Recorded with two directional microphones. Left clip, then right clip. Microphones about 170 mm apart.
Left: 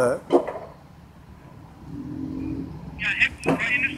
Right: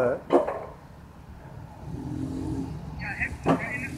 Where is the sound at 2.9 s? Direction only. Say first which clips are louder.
Left 10 dB; 30° left (ahead or behind).